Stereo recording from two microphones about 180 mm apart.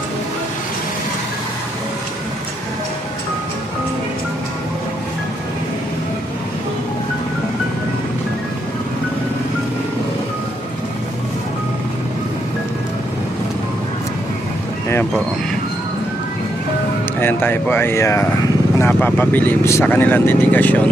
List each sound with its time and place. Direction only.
17.2 s speech: 10° left (ahead or behind)